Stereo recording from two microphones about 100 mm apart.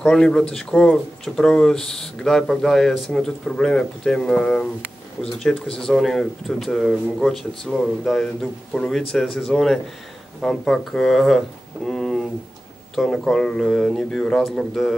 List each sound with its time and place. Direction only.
0.0 s speech: 10° left (ahead or behind)
5.7 s speech: 5° left (ahead or behind)